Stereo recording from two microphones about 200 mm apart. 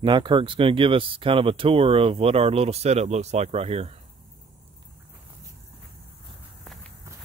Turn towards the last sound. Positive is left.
turn(degrees=0)  # may be behind; listen again after turning